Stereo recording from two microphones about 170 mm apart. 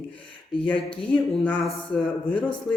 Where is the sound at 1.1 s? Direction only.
5° left (ahead or behind).